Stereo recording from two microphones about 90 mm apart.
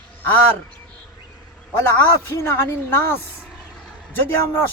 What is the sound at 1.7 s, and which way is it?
Speech, 25° left (ahead or behind).